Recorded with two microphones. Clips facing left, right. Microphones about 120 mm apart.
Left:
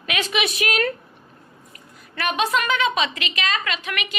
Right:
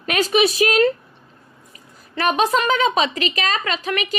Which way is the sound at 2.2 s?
40° right (ahead or behind).